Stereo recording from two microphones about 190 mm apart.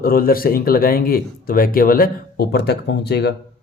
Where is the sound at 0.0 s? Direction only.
50° left (ahead or behind).